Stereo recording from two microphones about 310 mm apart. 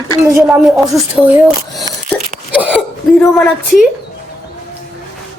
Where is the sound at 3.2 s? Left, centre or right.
Centre.